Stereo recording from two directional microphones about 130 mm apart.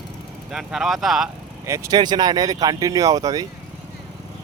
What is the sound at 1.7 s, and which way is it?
Speech, 30° right (ahead or behind).